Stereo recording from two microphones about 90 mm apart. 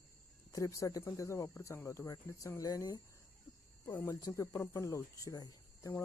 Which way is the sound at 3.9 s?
25° left (ahead or behind).